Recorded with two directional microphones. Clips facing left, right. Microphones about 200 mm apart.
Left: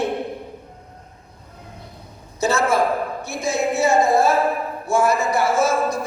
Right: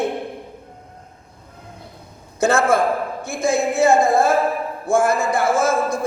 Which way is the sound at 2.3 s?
50° right (ahead or behind).